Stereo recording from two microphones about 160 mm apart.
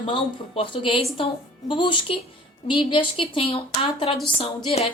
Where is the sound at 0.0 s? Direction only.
35° left (ahead or behind).